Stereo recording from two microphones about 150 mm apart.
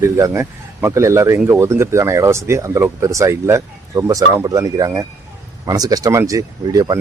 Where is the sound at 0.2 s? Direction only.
20° right (ahead or behind).